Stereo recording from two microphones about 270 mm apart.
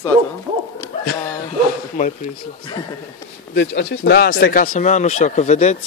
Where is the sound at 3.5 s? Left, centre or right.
Left.